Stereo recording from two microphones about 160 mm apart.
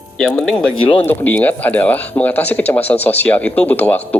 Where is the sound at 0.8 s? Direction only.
30° left (ahead or behind).